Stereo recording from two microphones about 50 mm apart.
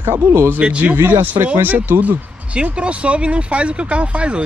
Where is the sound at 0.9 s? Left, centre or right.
Right.